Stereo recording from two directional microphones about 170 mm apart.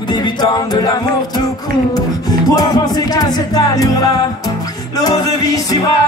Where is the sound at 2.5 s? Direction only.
20° left (ahead or behind).